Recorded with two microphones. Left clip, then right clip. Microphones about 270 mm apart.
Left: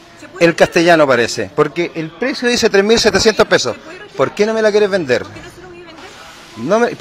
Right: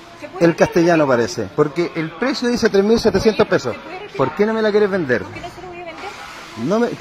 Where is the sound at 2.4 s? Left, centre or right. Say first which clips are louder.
Left 5 dB; left.